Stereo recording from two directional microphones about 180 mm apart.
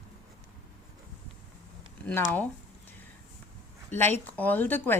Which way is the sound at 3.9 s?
10° left (ahead or behind).